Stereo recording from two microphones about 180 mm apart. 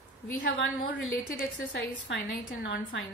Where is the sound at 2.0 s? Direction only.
75° left (ahead or behind).